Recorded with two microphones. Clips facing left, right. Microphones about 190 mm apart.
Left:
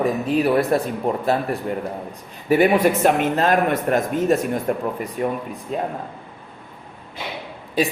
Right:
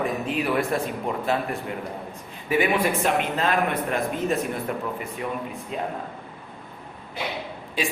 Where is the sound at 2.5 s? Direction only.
45° left (ahead or behind).